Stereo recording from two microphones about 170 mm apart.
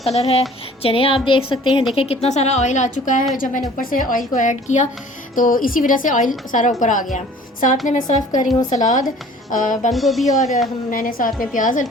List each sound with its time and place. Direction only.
0.0 s a woman's voice: 40° left (ahead or behind)
9.9 s speech: centre (ahead or behind)
10.9 s a woman's voice: 55° left (ahead or behind)